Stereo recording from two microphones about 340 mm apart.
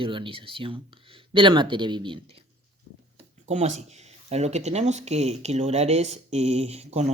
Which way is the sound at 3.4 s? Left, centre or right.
Right.